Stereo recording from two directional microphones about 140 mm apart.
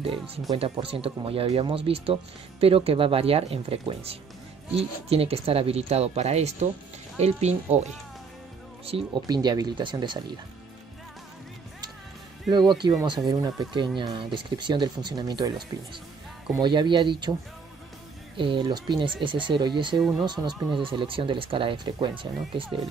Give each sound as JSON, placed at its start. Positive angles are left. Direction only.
{"t": 0.6, "sound": "speech", "side_deg": -40}
{"t": 8.8, "sound": "speech", "side_deg": -40}
{"t": 9.3, "sound": "speech", "side_deg": -30}
{"t": 12.5, "sound": "speech", "side_deg": -30}
{"t": 18.3, "sound": "speech", "side_deg": -35}